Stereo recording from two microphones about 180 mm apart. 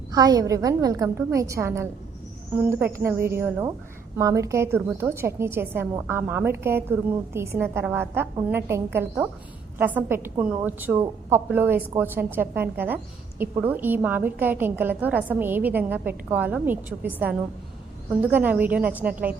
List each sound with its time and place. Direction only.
0.1 s a woman's voice: 20° right (ahead or behind)